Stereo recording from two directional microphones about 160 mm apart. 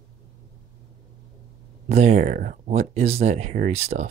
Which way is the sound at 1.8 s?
45° right (ahead or behind).